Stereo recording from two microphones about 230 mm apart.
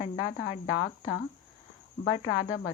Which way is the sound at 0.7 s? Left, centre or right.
Left.